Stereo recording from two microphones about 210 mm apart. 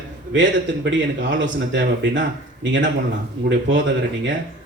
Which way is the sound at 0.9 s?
60° right (ahead or behind).